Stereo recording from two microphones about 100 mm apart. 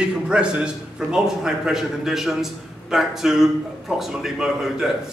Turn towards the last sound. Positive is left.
turn(degrees=-5)  # may be behind; listen again after turning